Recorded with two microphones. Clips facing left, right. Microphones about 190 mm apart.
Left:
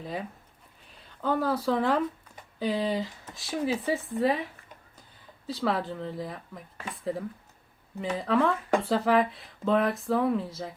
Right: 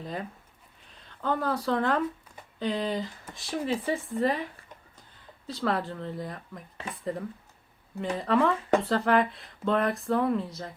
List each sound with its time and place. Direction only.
0.0 s speech: 5° left (ahead or behind)